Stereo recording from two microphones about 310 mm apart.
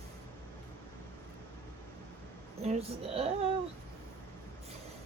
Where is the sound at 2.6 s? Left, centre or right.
Centre.